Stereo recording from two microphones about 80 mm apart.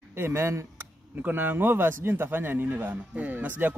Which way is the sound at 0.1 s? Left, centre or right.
Right.